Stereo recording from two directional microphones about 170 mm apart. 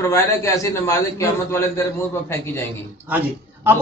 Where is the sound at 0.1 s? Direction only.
20° left (ahead or behind).